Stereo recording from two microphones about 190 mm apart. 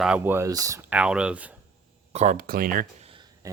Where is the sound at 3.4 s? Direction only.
15° right (ahead or behind).